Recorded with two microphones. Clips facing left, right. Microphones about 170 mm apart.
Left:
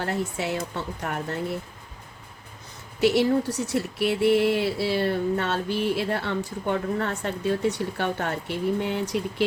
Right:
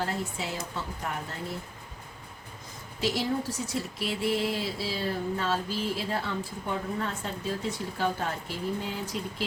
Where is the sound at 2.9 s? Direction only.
65° left (ahead or behind).